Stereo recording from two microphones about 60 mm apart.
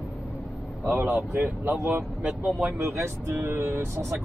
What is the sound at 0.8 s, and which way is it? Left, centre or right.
Speech, right.